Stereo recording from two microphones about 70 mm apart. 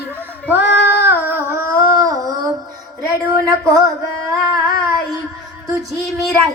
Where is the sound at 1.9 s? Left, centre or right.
Right.